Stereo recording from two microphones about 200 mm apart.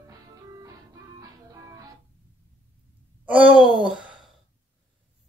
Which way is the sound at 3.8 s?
Centre (ahead or behind).